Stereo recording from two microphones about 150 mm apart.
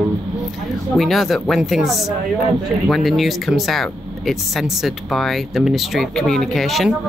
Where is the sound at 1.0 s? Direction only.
Centre (ahead or behind).